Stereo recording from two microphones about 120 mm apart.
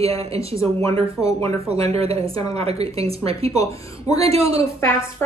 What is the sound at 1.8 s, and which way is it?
A woman's voice, 55° right (ahead or behind).